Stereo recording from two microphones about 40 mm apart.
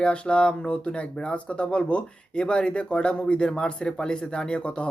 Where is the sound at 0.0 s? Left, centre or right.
Left.